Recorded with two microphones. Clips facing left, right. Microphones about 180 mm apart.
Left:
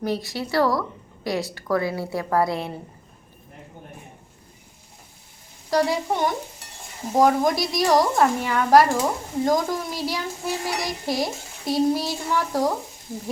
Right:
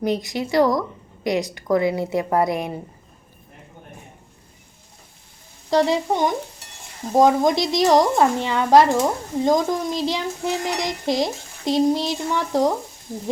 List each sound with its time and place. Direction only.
0.0 s speech: 20° right (ahead or behind)
5.7 s a woman's voice: 20° right (ahead or behind)